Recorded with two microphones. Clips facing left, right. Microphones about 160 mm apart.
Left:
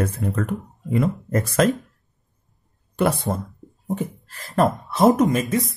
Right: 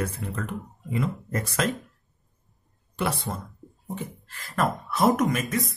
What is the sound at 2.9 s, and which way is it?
Speech, 50° left (ahead or behind).